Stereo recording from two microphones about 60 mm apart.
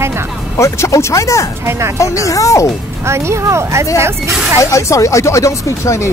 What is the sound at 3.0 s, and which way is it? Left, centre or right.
Speech, right.